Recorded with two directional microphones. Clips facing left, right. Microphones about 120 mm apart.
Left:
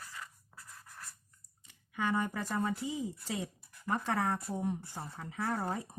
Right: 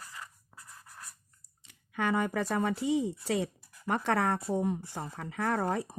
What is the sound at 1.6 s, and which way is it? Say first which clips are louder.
Speech: right 3 dB; 70° right (ahead or behind).